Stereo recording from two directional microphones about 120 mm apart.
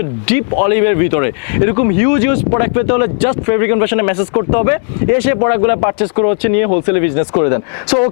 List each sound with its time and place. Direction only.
0.3 s speech: 15° left (ahead or behind)